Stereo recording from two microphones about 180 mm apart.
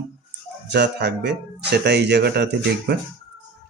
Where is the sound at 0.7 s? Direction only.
70° right (ahead or behind).